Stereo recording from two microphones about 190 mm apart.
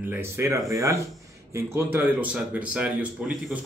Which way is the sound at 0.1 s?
15° right (ahead or behind).